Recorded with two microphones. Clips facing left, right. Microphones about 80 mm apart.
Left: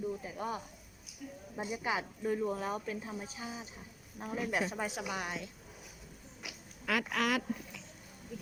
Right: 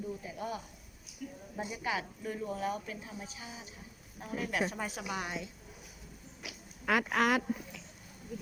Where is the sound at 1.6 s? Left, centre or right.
Left.